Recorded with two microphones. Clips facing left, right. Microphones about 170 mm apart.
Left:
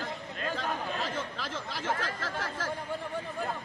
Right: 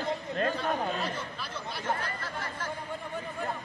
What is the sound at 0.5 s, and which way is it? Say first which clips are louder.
Speech: right 3 dB; 90° left.